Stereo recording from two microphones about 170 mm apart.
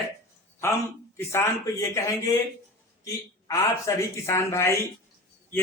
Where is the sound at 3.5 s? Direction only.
20° left (ahead or behind).